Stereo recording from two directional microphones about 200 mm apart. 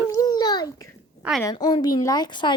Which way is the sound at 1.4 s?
20° left (ahead or behind).